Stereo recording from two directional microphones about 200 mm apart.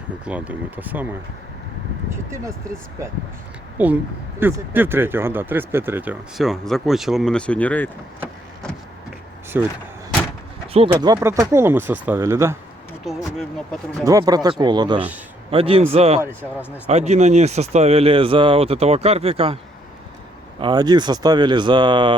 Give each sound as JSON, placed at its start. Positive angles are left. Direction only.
{"t": 0.3, "sound": "speech", "side_deg": -5}
{"t": 2.0, "sound": "speech", "side_deg": -15}
{"t": 3.8, "sound": "speech", "side_deg": -10}
{"t": 9.5, "sound": "speech", "side_deg": -10}
{"t": 10.9, "sound": "speech", "side_deg": -15}
{"t": 13.1, "sound": "speech", "side_deg": 0}
{"t": 14.0, "sound": "speech", "side_deg": -15}
{"t": 20.6, "sound": "speech", "side_deg": -20}